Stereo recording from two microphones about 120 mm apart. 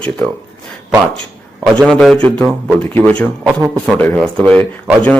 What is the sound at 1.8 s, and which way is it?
A man's voice, centre (ahead or behind).